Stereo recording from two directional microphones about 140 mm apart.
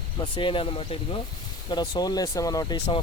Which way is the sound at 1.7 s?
30° left (ahead or behind).